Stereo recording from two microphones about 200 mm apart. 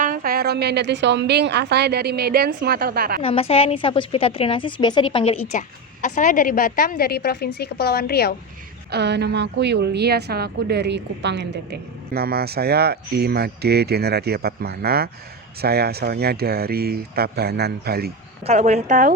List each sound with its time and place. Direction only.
0.0 s a woman's voice: 45° right (ahead or behind)
3.2 s a woman's voice: 30° left (ahead or behind)
5.5 s a woman's voice: 40° left (ahead or behind)
8.9 s a woman's voice: 55° right (ahead or behind)
18.4 s speech: 35° right (ahead or behind)